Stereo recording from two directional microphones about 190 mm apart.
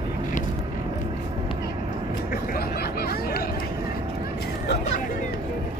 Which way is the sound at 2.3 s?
55° left (ahead or behind).